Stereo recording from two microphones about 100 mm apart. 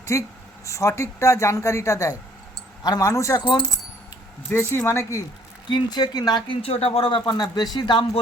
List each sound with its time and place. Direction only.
0.0 s speech: 30° left (ahead or behind)
3.4 s speech: 50° left (ahead or behind)
4.9 s speech: 30° left (ahead or behind)
5.6 s speech: 45° left (ahead or behind)
6.7 s speech: 85° left
7.3 s speech: 45° left (ahead or behind)